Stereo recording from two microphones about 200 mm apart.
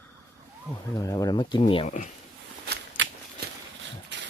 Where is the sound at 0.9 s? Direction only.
15° left (ahead or behind).